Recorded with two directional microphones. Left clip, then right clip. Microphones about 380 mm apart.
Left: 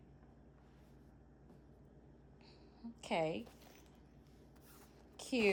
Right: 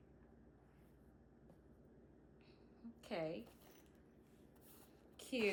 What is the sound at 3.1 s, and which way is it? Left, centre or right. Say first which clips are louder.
Speech: left 7 dB; left.